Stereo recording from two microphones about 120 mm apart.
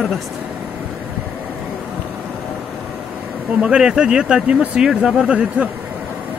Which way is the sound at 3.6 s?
5° right (ahead or behind).